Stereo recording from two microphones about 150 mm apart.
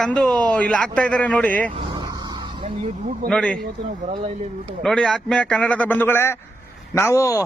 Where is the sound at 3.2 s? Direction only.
5° left (ahead or behind).